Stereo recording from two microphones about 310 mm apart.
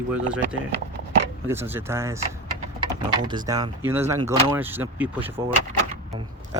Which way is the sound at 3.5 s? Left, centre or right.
Centre.